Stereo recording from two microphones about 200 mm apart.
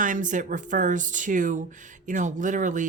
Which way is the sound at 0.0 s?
40° right (ahead or behind).